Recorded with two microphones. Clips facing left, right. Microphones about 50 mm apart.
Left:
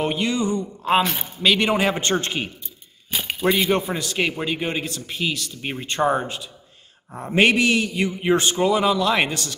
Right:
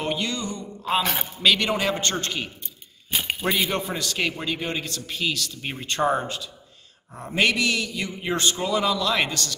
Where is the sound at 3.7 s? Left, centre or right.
Centre.